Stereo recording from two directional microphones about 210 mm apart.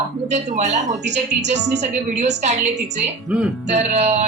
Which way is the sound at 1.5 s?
35° right (ahead or behind).